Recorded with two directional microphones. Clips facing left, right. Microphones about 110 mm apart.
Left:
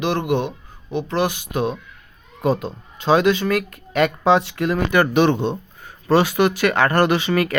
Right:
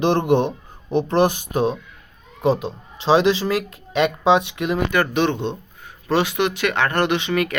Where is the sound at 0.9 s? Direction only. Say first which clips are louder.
Right 4 dB; 50° right (ahead or behind).